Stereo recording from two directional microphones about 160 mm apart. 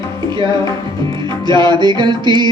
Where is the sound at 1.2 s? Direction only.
30° right (ahead or behind).